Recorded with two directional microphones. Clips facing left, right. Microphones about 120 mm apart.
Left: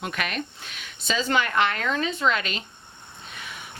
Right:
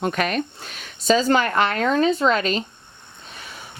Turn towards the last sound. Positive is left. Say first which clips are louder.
# even
turn(degrees=-35)  # may be behind; listen again after turning